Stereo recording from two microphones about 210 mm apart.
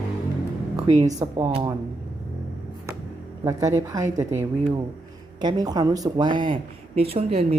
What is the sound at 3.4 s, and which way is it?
A woman's voice, 15° right (ahead or behind).